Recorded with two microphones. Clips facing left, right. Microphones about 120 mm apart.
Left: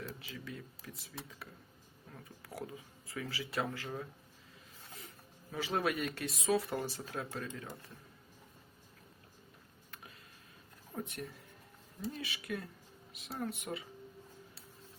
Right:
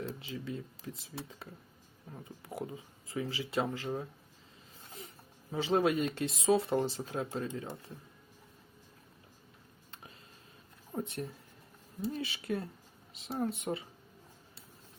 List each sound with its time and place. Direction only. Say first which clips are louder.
0.0 s speech: right 6 dB; 25° right (ahead or behind)
10.9 s a woman's voice: right 5 dB; 25° right (ahead or behind)